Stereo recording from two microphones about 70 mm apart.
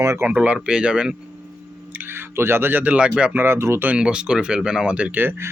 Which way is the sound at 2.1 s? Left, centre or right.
Right.